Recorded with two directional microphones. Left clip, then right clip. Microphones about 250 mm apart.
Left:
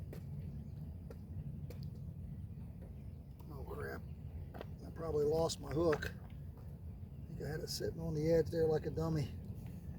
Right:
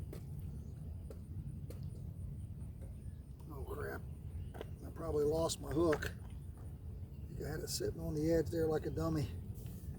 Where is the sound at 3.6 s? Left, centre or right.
Centre.